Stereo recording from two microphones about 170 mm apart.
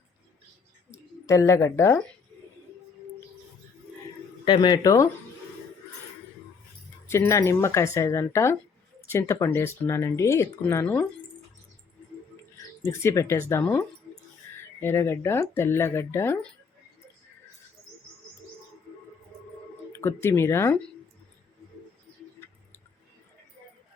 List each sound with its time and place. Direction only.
0.9 s speech: 15° left (ahead or behind)
4.4 s speech: 25° left (ahead or behind)
7.1 s speech: 15° left (ahead or behind)
12.8 s speech: 15° left (ahead or behind)
20.0 s speech: 15° left (ahead or behind)